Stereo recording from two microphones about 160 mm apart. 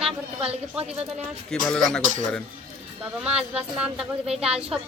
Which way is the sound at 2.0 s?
50° right (ahead or behind).